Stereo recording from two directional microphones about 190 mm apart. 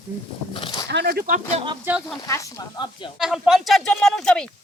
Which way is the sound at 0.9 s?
60° right (ahead or behind).